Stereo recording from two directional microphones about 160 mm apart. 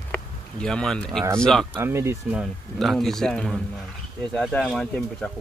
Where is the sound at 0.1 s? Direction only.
5° left (ahead or behind).